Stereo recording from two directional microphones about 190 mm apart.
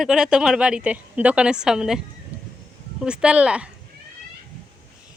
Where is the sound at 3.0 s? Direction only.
5° right (ahead or behind).